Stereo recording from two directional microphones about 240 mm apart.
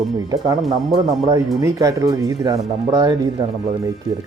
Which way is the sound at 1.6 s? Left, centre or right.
Centre.